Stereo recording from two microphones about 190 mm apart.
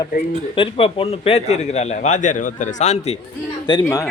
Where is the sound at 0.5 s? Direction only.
30° left (ahead or behind).